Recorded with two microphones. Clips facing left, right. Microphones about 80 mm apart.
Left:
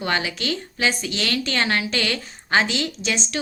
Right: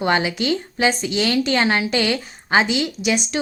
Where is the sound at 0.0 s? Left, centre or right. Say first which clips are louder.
Right 5 dB; right.